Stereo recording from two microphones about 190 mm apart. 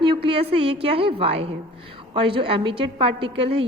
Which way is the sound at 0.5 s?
30° right (ahead or behind).